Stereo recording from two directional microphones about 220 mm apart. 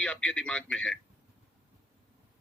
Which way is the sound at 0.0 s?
5° left (ahead or behind).